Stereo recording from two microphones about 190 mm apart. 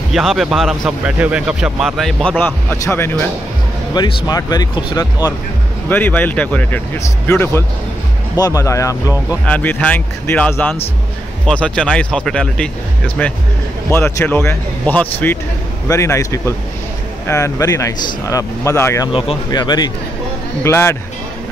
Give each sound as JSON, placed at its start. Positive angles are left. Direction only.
{"t": 0.1, "sound": "speech", "side_deg": 0}
{"t": 5.9, "sound": "speech", "side_deg": 10}
{"t": 19.1, "sound": "speech", "side_deg": 25}